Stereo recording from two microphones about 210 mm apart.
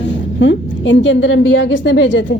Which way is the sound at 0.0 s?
60° left (ahead or behind).